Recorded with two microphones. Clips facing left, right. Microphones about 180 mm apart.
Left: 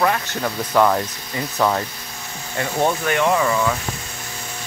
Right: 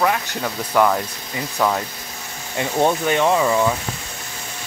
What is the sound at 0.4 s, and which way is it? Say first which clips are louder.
Speech: left 1 dB; centre (ahead or behind).